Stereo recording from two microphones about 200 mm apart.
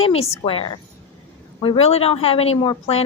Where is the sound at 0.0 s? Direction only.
30° left (ahead or behind).